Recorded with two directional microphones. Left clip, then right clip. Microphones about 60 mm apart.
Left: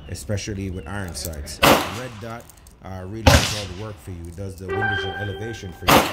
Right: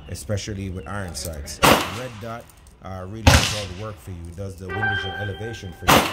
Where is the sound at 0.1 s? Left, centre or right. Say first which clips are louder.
Even; right.